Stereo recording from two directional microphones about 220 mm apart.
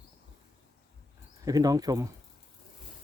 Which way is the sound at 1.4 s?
15° right (ahead or behind).